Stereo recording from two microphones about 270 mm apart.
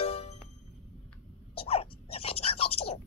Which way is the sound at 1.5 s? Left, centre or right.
Left.